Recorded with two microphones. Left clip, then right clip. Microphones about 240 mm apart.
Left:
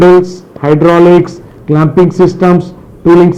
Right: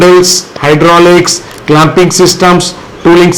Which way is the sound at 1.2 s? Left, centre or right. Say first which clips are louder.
Right 3 dB; centre.